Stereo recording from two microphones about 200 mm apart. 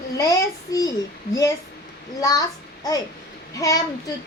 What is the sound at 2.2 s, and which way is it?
Speech, 20° left (ahead or behind).